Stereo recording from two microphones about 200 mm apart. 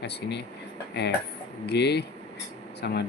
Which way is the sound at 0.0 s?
55° left (ahead or behind).